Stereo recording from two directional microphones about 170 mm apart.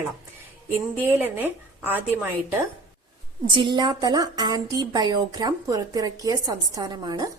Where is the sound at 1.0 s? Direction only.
10° right (ahead or behind).